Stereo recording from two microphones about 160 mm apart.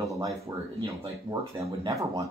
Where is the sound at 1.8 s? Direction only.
20° right (ahead or behind).